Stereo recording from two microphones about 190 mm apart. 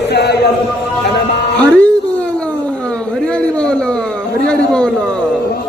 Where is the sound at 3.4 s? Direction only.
5° left (ahead or behind).